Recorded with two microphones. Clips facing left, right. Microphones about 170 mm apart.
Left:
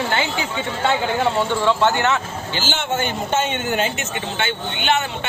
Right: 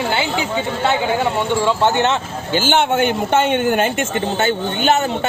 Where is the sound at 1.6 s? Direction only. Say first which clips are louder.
Right 2 dB; 20° right (ahead or behind).